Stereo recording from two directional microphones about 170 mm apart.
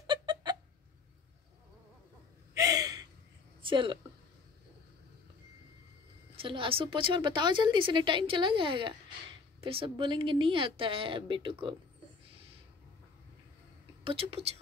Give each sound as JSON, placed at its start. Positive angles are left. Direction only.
{"t": 0.0, "sound": "a sound", "side_deg": -30}
{"t": 2.5, "sound": "gasp", "side_deg": -20}
{"t": 3.6, "sound": "a woman's voice", "side_deg": -30}
{"t": 6.4, "sound": "a woman's voice", "side_deg": -30}
{"t": 14.0, "sound": "a woman's voice", "side_deg": -35}